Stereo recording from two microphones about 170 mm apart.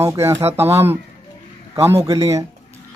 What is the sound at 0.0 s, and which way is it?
Speech, 15° right (ahead or behind).